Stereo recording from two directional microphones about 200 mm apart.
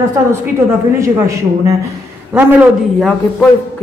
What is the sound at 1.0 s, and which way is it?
Speech, 15° right (ahead or behind).